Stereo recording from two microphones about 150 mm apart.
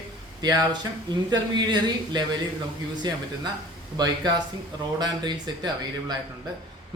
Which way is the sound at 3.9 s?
25° right (ahead or behind).